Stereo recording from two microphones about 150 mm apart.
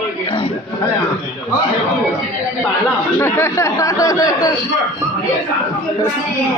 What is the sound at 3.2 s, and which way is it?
Speech, 15° left (ahead or behind).